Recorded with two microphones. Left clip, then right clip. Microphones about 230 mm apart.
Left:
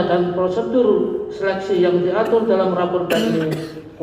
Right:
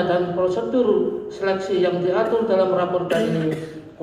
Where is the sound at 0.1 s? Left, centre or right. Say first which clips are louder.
Left 2 dB; right.